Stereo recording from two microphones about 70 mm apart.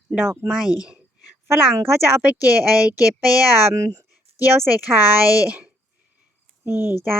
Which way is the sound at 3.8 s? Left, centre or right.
Right.